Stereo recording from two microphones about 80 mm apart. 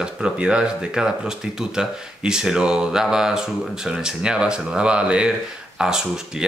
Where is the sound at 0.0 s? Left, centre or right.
Centre.